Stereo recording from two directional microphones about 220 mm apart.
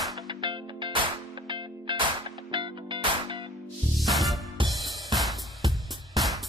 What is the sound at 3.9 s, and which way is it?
Music, centre (ahead or behind).